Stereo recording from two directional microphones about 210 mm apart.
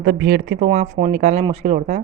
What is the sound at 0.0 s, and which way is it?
A woman's voice, 45° right (ahead or behind).